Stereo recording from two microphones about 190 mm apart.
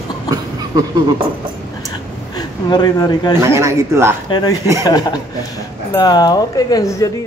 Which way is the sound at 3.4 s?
15° right (ahead or behind).